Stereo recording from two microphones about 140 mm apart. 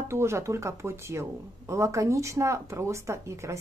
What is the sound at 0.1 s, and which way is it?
Speech, 20° right (ahead or behind).